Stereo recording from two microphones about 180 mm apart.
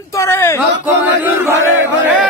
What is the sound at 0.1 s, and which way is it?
Speech, 15° left (ahead or behind).